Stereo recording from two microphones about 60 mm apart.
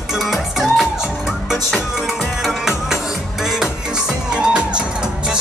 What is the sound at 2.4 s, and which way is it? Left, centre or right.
Music, centre.